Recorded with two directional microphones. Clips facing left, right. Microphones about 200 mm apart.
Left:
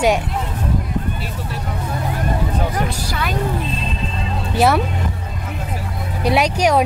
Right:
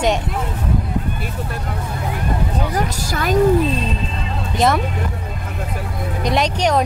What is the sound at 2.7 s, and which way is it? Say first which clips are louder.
Speech: right 1 dB; 40° right (ahead or behind).